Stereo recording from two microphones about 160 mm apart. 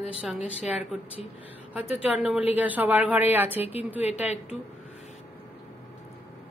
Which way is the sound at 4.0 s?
40° left (ahead or behind).